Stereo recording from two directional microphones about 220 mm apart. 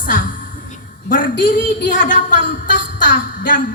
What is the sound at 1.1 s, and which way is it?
A woman's voice, 40° left (ahead or behind).